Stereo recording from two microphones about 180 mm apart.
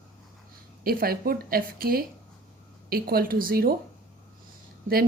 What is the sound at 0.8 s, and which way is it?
A woman's voice, 55° right (ahead or behind).